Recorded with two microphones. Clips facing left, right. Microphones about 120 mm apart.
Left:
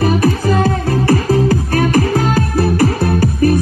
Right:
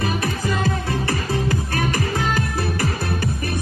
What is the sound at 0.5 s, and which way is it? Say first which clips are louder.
Music: left 8 dB; 45° left (ahead or behind).